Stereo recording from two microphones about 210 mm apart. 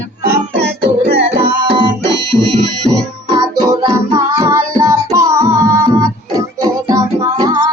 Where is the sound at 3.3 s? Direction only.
20° right (ahead or behind).